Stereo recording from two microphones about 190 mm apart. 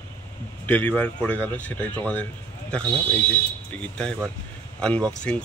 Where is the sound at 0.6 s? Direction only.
5° left (ahead or behind).